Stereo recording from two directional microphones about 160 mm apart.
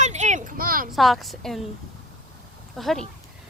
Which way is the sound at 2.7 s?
Centre (ahead or behind).